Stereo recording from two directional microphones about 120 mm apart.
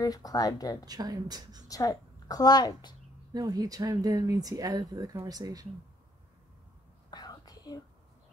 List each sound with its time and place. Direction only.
0.0 s speech: 30° left (ahead or behind)
0.8 s speech: 30° right (ahead or behind)
1.7 s a woman's voice: 30° left (ahead or behind)
3.3 s speech: 30° right (ahead or behind)
7.1 s whispering: 35° left (ahead or behind)